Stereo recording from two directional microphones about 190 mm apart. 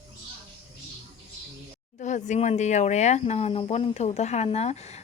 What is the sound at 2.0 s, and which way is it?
Speech, 40° left (ahead or behind).